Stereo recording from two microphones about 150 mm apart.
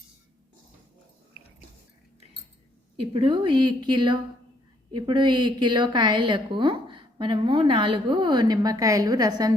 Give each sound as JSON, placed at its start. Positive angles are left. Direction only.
{"t": 3.1, "sound": "a woman's voice", "side_deg": -35}